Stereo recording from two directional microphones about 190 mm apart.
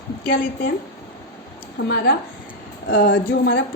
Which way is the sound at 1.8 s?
75° left (ahead or behind).